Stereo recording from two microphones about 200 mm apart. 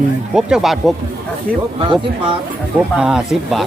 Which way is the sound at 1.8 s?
25° right (ahead or behind).